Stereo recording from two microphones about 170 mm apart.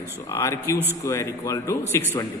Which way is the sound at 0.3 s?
15° left (ahead or behind).